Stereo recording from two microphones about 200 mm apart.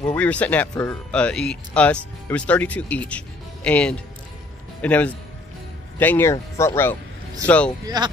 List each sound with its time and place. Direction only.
0.1 s speech: 5° left (ahead or behind)
7.8 s speech: 20° right (ahead or behind)